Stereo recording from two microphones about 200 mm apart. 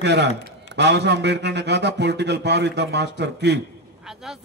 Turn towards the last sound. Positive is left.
turn(degrees=-55)  # may be behind; listen again after turning